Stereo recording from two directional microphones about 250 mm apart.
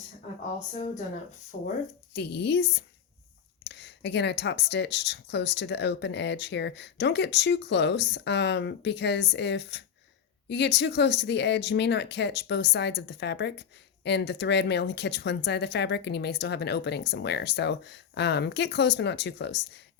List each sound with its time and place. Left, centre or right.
1.5 s speech: left